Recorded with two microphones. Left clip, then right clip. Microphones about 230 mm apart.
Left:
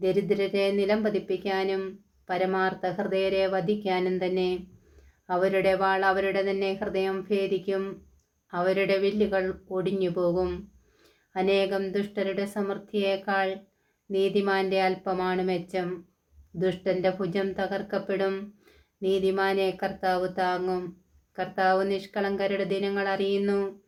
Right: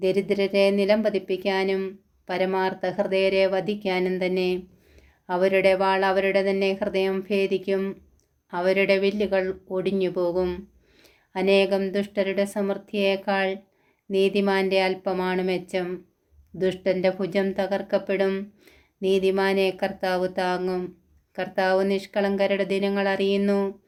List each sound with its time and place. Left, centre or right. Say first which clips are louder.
0.0 s speech: right 2 dB; right